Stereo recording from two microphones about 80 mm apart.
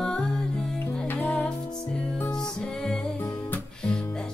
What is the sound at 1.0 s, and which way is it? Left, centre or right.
Music, left.